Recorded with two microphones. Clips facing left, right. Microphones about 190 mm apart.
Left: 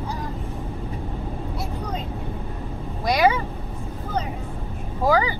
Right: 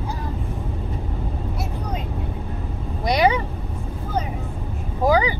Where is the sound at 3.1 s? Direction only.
20° right (ahead or behind).